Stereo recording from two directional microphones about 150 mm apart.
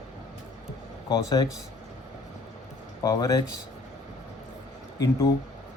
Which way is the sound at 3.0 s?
25° left (ahead or behind).